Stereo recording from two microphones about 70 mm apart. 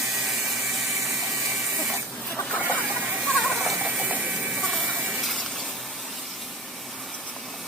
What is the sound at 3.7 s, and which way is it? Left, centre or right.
Ratchet, centre.